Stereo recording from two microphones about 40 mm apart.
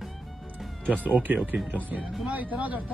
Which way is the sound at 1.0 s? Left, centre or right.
Right.